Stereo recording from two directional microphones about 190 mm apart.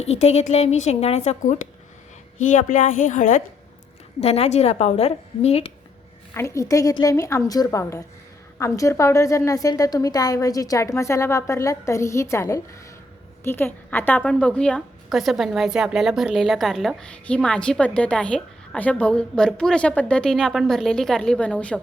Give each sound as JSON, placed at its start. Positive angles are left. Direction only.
{"t": 0.0, "sound": "a woman's voice", "side_deg": 35}
{"t": 6.3, "sound": "a woman's voice", "side_deg": 15}